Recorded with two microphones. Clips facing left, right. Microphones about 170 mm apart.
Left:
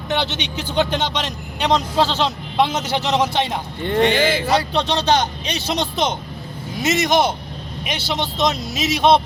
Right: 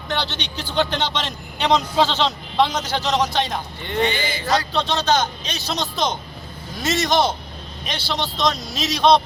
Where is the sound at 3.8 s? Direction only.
50° left (ahead or behind).